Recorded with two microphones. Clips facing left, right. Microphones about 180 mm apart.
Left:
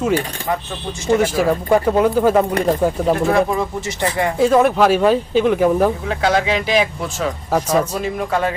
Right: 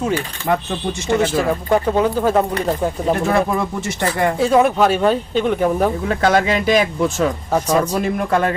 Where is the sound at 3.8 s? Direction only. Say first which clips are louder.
Right 1 dB; 55° right (ahead or behind).